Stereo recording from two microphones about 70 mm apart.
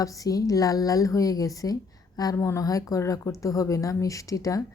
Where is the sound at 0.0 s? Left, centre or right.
Left.